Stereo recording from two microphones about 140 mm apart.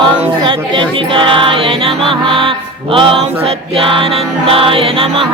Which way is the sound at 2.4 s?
40° right (ahead or behind).